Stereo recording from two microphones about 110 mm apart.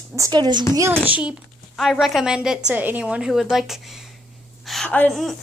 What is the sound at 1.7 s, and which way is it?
A woman's voice, centre (ahead or behind).